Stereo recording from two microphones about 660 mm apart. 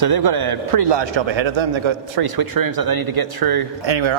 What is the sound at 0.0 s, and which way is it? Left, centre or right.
A man's voice, right.